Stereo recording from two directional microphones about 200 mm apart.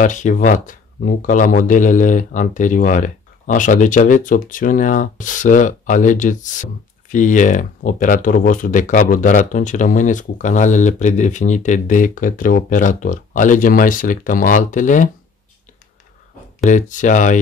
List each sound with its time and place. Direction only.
0.0 s speech: 40° left (ahead or behind)
16.6 s speech: 40° left (ahead or behind)